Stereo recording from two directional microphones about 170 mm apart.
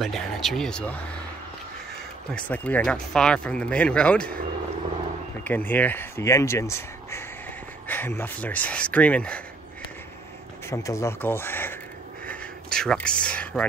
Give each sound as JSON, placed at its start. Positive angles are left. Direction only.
{"t": 0.0, "sound": "speech", "side_deg": 0}
{"t": 2.3, "sound": "speech", "side_deg": 10}
{"t": 5.4, "sound": "speech", "side_deg": 10}
{"t": 10.7, "sound": "speech", "side_deg": 20}